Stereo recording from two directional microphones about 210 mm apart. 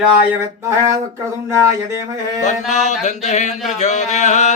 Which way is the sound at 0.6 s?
15° right (ahead or behind).